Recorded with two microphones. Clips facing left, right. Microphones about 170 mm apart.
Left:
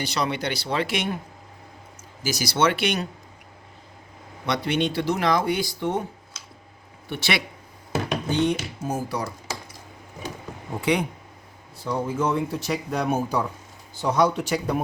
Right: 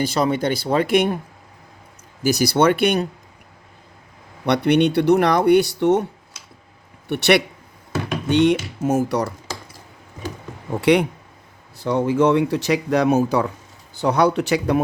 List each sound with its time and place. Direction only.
0.0 s speech: 50° right (ahead or behind)
2.4 s speech: 55° right (ahead or behind)
4.4 s speech: 65° right (ahead or behind)
7.1 s speech: 65° right (ahead or behind)
8.3 s speech: 80° right
10.8 s speech: 75° right (ahead or behind)
14.0 s speech: 65° right (ahead or behind)